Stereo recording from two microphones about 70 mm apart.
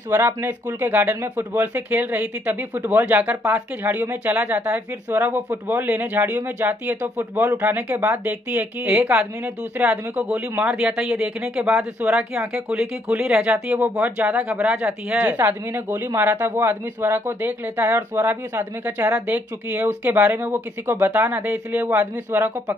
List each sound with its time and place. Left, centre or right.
0.1 s speech: right
5.1 s speech: right